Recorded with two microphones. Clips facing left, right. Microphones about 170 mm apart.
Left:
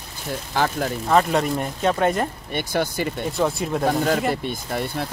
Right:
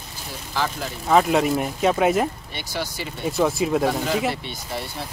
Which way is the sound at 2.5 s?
55° left (ahead or behind).